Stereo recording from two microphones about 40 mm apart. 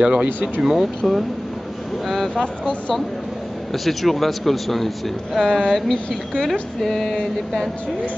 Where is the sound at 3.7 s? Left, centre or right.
Centre.